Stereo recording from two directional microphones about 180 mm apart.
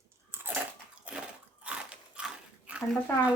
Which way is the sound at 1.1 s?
10° right (ahead or behind).